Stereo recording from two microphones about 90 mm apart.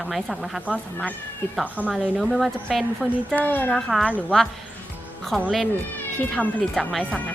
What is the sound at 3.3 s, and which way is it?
Speech, 20° left (ahead or behind).